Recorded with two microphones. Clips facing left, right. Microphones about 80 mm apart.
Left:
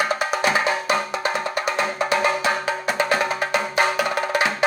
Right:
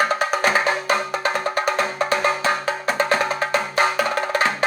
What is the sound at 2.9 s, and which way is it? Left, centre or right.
Music, right.